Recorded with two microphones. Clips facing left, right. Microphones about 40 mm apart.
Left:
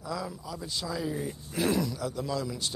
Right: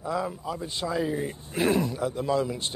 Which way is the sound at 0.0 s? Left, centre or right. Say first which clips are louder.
Right 6 dB; right.